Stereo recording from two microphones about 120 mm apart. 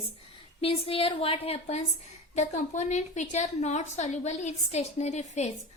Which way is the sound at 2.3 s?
80° left.